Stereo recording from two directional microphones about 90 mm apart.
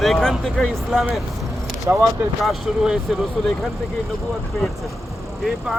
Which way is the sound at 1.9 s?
30° right (ahead or behind).